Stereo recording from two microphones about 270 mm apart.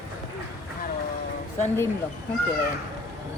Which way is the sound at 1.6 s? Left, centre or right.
Centre.